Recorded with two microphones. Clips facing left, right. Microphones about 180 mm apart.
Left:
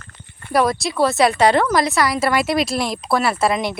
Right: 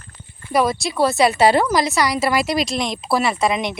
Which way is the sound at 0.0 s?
65° left (ahead or behind).